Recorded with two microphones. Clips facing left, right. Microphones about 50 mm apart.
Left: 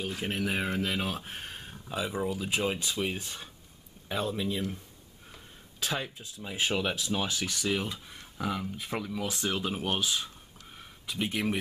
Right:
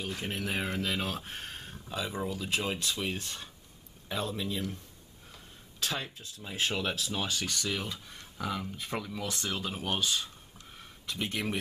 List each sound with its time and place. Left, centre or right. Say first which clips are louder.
0.0 s speech: left 3 dB; centre